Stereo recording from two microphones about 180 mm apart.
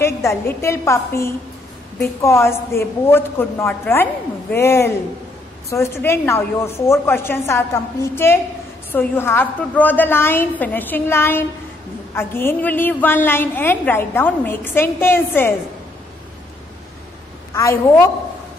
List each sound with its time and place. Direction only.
0.0 s a woman's voice: 15° left (ahead or behind)
17.6 s a woman's voice: 15° left (ahead or behind)